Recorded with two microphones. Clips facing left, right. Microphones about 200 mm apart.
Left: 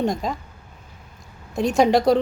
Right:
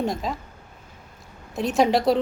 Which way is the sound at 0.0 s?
Centre (ahead or behind).